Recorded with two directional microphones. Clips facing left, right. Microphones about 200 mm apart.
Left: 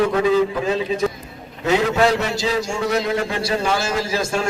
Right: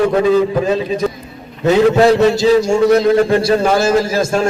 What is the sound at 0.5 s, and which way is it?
A man's voice, 40° right (ahead or behind).